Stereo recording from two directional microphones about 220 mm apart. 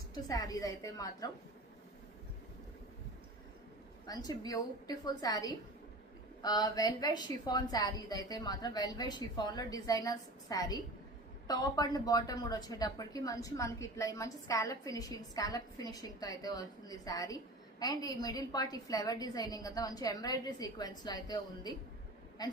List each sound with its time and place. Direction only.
0.1 s a woman's voice: 15° left (ahead or behind)
4.0 s a woman's voice: 15° left (ahead or behind)